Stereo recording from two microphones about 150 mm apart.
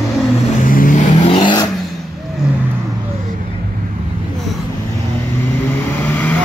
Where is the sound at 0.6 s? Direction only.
65° left (ahead or behind).